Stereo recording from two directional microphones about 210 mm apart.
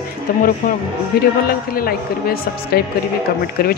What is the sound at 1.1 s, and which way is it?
Speech, 45° left (ahead or behind).